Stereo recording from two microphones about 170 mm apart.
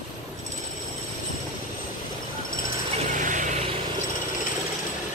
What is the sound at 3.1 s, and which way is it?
Vehicle, 50° right (ahead or behind).